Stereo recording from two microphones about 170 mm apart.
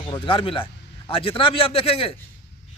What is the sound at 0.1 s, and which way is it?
Speech, 30° left (ahead or behind).